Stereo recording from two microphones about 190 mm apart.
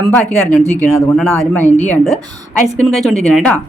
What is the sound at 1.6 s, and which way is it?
Speech, 40° left (ahead or behind).